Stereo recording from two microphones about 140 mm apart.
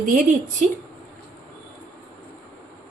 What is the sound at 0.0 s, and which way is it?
Speech, 75° right (ahead or behind).